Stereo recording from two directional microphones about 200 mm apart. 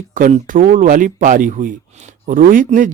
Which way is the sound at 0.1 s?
40° right (ahead or behind).